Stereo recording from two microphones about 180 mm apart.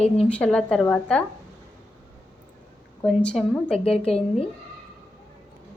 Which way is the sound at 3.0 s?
Centre (ahead or behind).